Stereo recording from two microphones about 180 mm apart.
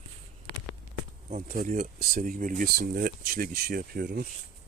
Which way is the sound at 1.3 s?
40° right (ahead or behind).